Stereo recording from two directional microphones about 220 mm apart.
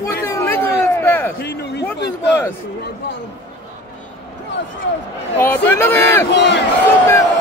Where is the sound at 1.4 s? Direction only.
50° left (ahead or behind).